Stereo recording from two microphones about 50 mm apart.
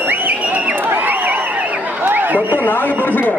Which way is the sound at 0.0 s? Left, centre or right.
Right.